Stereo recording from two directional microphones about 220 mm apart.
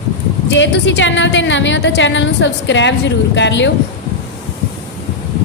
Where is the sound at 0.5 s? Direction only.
55° left (ahead or behind).